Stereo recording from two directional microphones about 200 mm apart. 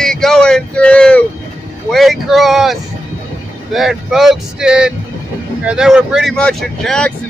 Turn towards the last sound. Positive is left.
turn(degrees=5)  # may be behind; listen again after turning